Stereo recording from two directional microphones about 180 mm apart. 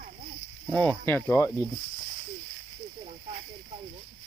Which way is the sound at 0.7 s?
10° left (ahead or behind).